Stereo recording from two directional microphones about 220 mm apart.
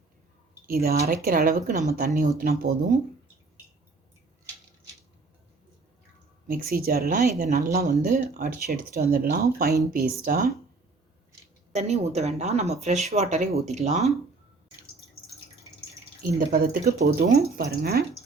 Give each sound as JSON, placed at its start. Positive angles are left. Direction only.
{"t": 0.7, "sound": "speech", "side_deg": -45}
{"t": 6.5, "sound": "speech", "side_deg": -40}
{"t": 11.7, "sound": "speech", "side_deg": -30}
{"t": 16.2, "sound": "speech", "side_deg": -40}